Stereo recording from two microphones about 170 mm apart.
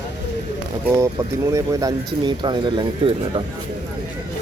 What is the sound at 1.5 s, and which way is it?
Speech, 20° right (ahead or behind).